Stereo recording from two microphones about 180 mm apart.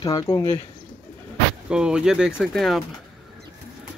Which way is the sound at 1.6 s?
5° right (ahead or behind).